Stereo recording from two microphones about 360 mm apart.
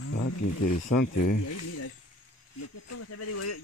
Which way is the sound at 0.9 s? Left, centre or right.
Left.